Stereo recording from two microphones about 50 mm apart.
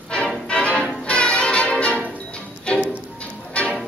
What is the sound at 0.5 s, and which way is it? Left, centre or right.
Music, left.